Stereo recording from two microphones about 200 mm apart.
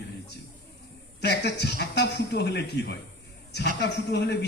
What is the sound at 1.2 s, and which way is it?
Speech, 60° left (ahead or behind).